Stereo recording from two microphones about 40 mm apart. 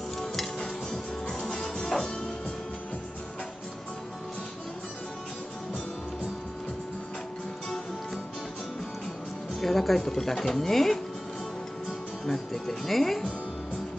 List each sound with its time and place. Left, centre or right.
0.9 s music: centre
9.6 s speech: centre
12.3 s speech: centre